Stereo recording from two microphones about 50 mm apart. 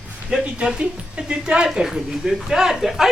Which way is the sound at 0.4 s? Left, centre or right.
Right.